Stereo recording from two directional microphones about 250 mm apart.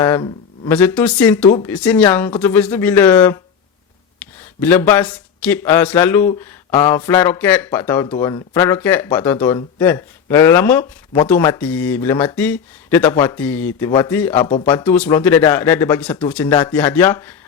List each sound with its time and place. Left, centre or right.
0.0 s speech: centre
4.6 s speech: centre
14.3 s speech: left
14.6 s speech: centre